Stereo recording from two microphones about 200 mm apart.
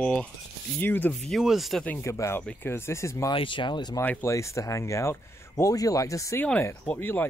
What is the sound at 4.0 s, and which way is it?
Speech, 10° left (ahead or behind).